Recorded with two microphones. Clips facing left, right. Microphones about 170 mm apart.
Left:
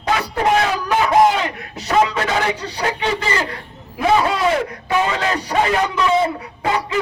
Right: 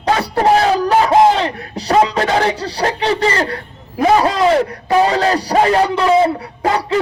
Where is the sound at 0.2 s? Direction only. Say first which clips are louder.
Right 5 dB; 35° right (ahead or behind).